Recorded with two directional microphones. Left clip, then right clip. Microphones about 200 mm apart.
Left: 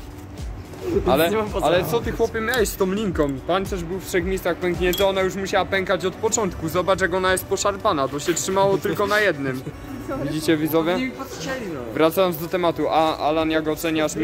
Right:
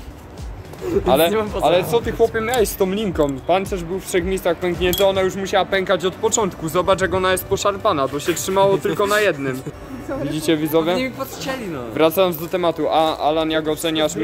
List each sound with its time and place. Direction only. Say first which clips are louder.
1.0 s speech: right 3 dB; centre (ahead or behind)
11.0 s speech: right 4 dB; 55° right (ahead or behind)
11.9 s speech: right 3 dB; centre (ahead or behind)